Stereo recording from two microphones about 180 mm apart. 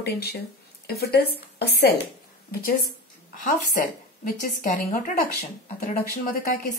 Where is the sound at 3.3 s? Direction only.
45° left (ahead or behind).